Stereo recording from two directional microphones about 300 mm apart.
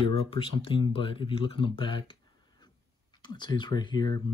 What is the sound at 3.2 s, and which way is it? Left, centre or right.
Speech, centre.